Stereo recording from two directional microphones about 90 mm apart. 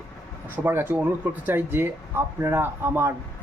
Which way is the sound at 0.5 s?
25° right (ahead or behind).